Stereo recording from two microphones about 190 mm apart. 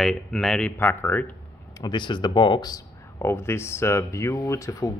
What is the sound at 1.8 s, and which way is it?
Speech, 25° left (ahead or behind).